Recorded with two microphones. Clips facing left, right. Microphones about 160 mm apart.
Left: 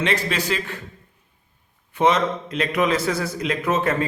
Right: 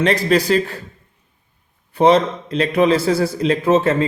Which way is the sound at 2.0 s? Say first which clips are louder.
Right 6 dB; 35° right (ahead or behind).